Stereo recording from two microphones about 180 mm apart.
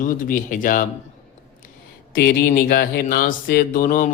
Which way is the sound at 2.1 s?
55° left (ahead or behind).